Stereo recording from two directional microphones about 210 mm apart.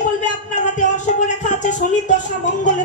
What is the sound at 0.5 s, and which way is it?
Speech, 35° left (ahead or behind).